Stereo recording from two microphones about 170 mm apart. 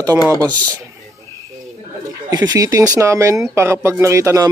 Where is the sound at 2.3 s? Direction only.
25° right (ahead or behind).